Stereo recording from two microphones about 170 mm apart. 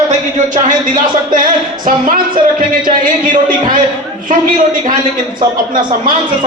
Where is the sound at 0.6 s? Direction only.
50° right (ahead or behind).